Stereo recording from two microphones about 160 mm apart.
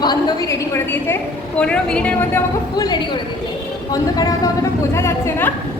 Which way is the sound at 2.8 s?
25° left (ahead or behind).